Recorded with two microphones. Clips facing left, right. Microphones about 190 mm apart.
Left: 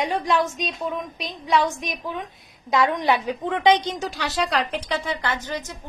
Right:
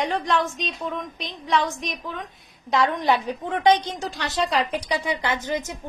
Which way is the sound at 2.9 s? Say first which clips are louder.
Even; 15° left (ahead or behind).